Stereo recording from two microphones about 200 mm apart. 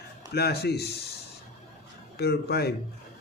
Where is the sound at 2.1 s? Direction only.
55° left (ahead or behind).